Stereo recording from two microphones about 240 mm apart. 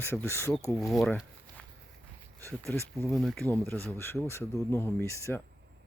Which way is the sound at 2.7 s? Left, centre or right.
Centre.